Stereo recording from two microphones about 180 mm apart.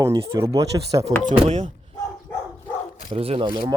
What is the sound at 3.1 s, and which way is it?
Speech, 30° right (ahead or behind).